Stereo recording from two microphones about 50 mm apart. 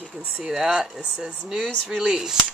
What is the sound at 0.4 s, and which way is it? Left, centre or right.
Speech, centre.